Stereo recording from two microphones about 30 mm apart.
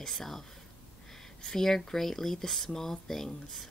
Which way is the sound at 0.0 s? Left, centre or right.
Centre.